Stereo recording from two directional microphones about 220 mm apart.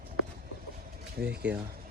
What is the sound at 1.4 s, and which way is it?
Speech, 5° right (ahead or behind).